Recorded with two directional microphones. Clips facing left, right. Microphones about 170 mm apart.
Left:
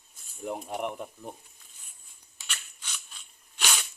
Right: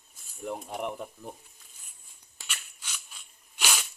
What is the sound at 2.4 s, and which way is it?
Scissors, 10° right (ahead or behind).